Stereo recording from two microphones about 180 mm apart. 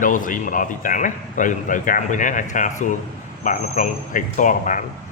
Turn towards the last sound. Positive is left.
turn(degrees=45)  # may be behind; listen again after turning